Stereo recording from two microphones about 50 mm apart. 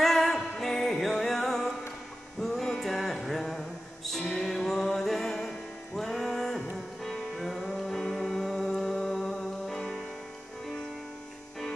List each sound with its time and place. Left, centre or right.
0.0 s music: centre